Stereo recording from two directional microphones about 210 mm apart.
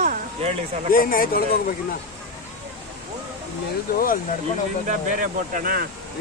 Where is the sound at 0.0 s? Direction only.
35° right (ahead or behind).